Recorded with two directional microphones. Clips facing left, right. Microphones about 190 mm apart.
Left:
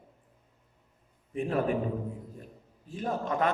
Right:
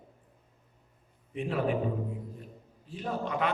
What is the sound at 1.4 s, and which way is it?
Speech, 45° left (ahead or behind).